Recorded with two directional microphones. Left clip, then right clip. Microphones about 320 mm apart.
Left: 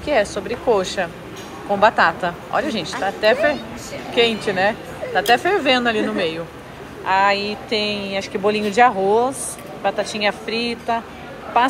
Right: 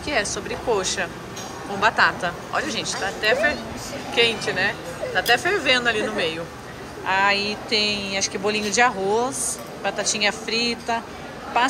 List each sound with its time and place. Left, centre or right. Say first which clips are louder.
0.0 s speech: left 5 dB; centre
7.3 s speech: even; right
8.2 s speech: left 7 dB; centre
10.4 s speech: even; right